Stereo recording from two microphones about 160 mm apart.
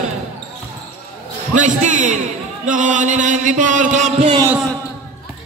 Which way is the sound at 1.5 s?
50° right (ahead or behind).